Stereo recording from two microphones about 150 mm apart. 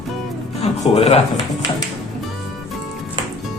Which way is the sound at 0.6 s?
45° left (ahead or behind).